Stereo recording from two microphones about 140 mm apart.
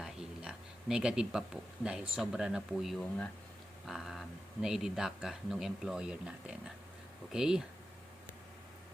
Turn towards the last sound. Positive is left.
turn(degrees=-5)  # may be behind; listen again after turning